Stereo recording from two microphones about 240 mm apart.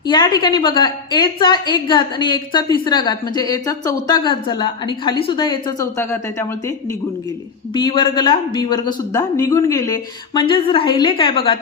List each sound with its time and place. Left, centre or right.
0.0 s a woman's voice: centre